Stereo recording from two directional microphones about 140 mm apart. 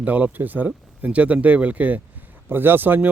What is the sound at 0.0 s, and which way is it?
Speech, 10° right (ahead or behind).